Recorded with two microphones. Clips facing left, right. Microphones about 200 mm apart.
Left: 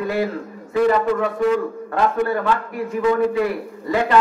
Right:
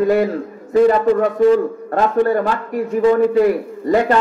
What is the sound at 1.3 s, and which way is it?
A man's voice, 35° right (ahead or behind).